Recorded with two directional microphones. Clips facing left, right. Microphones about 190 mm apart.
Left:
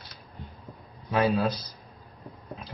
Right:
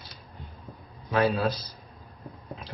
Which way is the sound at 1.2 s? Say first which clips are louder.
Even; centre (ahead or behind).